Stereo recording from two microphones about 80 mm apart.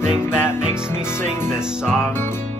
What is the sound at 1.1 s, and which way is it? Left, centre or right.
Music, left.